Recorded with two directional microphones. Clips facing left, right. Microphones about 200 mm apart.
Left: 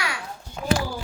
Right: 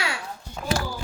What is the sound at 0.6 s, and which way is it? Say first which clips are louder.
Speech: left 4 dB; 5° left (ahead or behind).